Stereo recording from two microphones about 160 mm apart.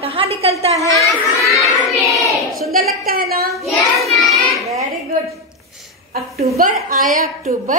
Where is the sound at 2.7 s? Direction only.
65° right (ahead or behind).